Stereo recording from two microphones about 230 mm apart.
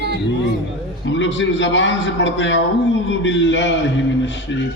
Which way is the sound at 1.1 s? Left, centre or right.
Left.